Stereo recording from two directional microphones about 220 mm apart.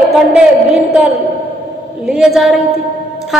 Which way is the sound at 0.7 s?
Centre (ahead or behind).